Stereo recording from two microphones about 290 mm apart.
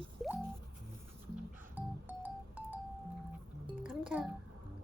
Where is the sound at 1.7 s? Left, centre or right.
Centre.